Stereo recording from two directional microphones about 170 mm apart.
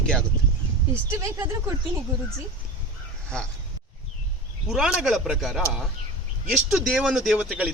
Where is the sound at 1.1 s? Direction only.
15° right (ahead or behind).